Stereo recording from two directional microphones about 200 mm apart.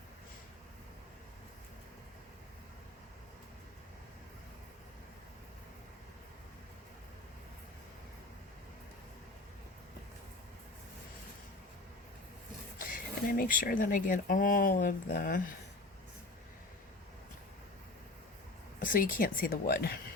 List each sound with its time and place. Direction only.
12.8 s speech: 45° left (ahead or behind)
18.8 s speech: 45° left (ahead or behind)